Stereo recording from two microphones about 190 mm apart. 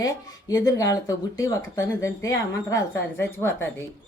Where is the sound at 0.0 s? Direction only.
20° left (ahead or behind).